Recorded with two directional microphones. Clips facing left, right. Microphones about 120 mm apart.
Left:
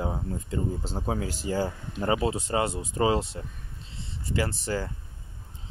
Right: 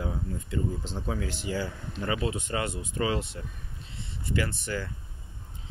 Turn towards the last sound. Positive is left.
turn(degrees=35)  # may be behind; listen again after turning